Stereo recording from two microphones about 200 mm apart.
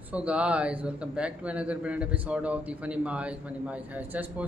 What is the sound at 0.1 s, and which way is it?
A man's voice, 5° right (ahead or behind).